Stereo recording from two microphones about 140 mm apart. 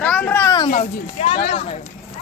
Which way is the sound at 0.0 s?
10° left (ahead or behind).